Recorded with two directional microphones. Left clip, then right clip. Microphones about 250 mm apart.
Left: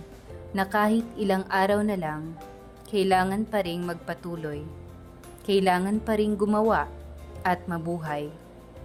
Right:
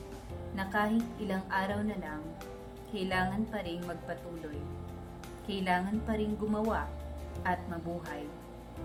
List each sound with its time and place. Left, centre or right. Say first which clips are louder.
0.5 s a woman's voice: left 8 dB; left
5.5 s a woman's voice: left 9 dB; left